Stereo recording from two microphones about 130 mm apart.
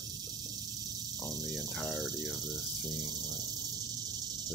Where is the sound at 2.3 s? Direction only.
30° right (ahead or behind).